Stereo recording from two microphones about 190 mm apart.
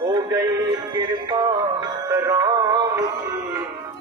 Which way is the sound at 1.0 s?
20° right (ahead or behind).